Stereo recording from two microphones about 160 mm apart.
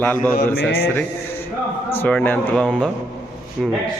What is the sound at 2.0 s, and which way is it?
A man's voice, 10° left (ahead or behind).